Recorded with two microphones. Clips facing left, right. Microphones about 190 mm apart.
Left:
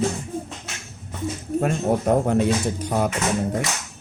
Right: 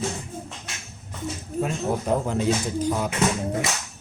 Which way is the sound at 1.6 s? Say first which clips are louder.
Left 3 dB; 60° left (ahead or behind).